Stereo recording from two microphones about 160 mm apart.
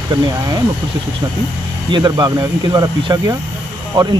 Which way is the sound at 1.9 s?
25° right (ahead or behind).